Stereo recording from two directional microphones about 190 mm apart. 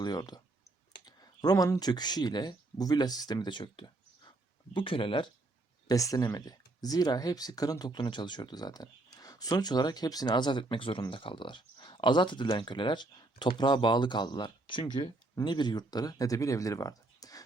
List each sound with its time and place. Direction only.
0.0 s speech: 20° left (ahead or behind)